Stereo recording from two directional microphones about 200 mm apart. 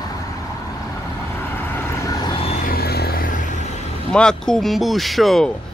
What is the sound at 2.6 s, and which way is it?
Music, 50° left (ahead or behind).